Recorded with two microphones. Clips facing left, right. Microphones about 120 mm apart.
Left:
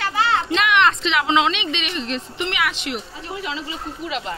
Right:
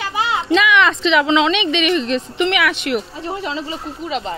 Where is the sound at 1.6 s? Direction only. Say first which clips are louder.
Right 9 dB; 70° right (ahead or behind); by 2.8 s 90° right.